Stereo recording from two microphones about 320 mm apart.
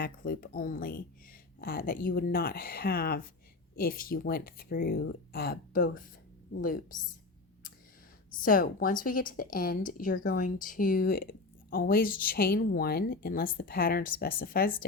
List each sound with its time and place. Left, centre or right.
0.0 s speech: left
8.4 s speech: left